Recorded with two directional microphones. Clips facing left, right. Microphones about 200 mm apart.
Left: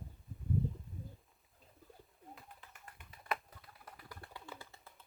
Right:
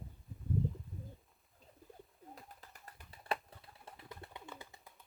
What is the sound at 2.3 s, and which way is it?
Bird, 40° right (ahead or behind).